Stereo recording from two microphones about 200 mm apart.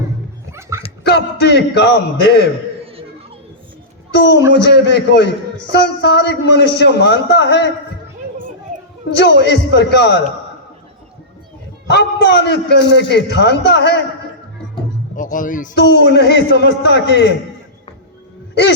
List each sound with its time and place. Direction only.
1.0 s a man's voice: 60° left (ahead or behind)
4.1 s a man's voice: 60° left (ahead or behind)
9.1 s a man's voice: 60° left (ahead or behind)
11.9 s a man's voice: 60° left (ahead or behind)
15.1 s a sound: 40° left (ahead or behind)
15.7 s a man's voice: 60° left (ahead or behind)